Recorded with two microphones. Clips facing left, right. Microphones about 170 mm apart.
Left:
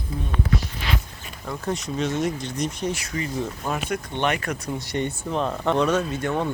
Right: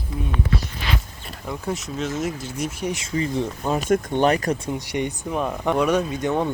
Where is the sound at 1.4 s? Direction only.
5° right (ahead or behind).